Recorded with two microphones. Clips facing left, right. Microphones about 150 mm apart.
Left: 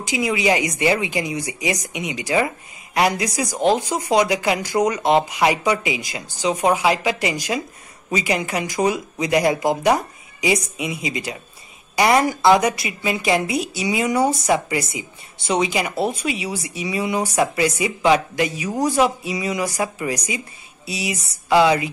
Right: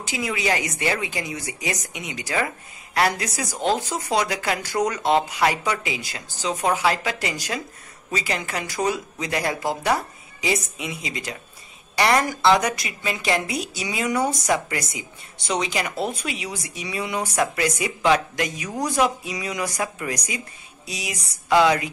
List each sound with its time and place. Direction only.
0.0 s speech: 10° left (ahead or behind)